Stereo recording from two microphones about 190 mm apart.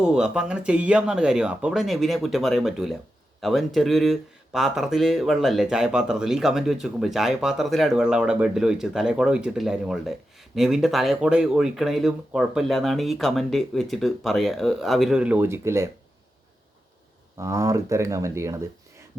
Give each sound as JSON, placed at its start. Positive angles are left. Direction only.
{"t": 0.0, "sound": "speech", "side_deg": -5}
{"t": 17.3, "sound": "speech", "side_deg": -15}